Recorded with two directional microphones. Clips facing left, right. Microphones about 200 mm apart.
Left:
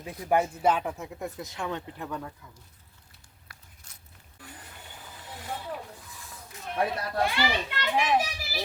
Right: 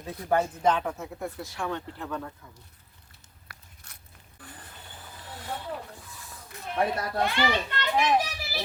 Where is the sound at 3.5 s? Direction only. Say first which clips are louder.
Right 3 dB; 65° right (ahead or behind).